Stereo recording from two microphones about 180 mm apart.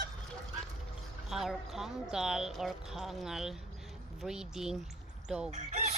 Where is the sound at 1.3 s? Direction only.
Centre (ahead or behind).